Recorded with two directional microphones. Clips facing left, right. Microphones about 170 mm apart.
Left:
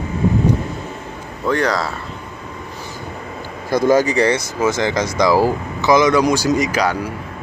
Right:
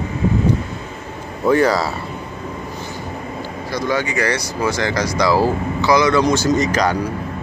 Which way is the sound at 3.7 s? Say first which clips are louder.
Left 7 dB; 45° left (ahead or behind).